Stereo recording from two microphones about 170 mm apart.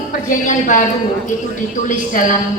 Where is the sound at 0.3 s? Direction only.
45° left (ahead or behind).